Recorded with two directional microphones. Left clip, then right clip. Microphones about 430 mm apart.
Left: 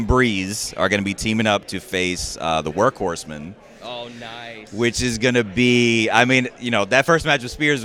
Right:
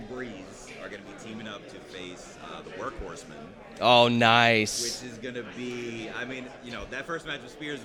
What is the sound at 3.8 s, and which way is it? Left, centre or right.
Speech, right.